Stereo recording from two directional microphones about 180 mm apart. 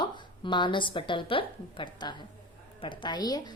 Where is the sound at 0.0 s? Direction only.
25° left (ahead or behind).